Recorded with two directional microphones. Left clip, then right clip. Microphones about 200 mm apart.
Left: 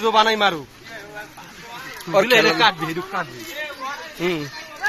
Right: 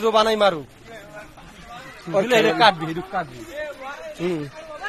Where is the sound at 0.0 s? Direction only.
65° right (ahead or behind).